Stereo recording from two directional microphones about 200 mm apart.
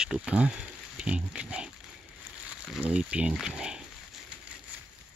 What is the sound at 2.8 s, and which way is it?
Speech, 5° right (ahead or behind).